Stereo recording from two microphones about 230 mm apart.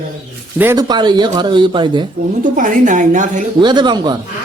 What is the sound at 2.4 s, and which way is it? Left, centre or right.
A woman's voice, right.